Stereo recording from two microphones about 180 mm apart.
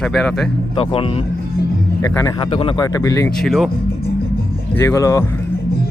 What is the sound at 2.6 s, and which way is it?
Speech, 30° left (ahead or behind).